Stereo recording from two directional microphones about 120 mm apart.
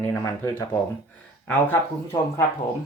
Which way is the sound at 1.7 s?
25° left (ahead or behind).